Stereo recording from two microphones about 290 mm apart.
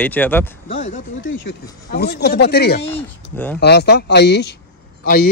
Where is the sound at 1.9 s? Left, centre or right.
Left.